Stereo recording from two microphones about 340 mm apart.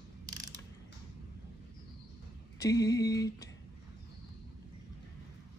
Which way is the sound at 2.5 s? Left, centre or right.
Centre.